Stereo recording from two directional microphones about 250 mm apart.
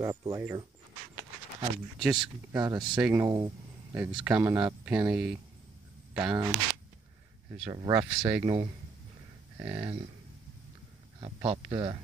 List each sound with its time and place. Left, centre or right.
0.0 s speech: centre
2.0 s speech: centre
7.6 s speech: centre
8.3 s speech: centre
9.6 s speech: centre
11.1 s speech: right